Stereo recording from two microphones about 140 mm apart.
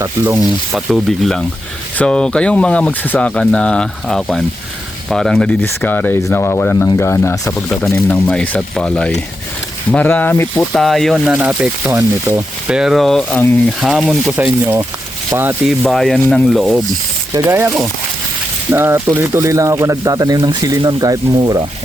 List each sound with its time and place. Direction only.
0.0 s speech: 20° right (ahead or behind)
0.3 s speech: 5° right (ahead or behind); by 10.7 s 15° left (ahead or behind)
10.7 s speech: centre (ahead or behind)
11.3 s speech: 10° right (ahead or behind)
11.9 s speech: 20° right (ahead or behind)
12.6 s speech: 5° right (ahead or behind)
14.3 s speech: 15° right (ahead or behind)
15.6 s speech: centre (ahead or behind)
17.3 s speech: 15° right (ahead or behind)